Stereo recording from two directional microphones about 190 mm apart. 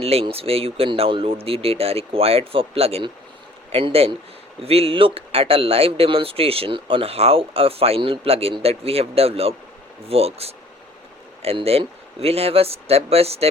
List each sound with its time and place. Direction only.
0.0 s a man's voice: 30° right (ahead or behind)